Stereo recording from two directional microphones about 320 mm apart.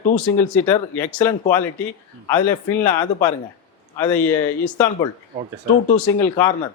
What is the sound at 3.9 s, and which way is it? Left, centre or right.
Speech, centre.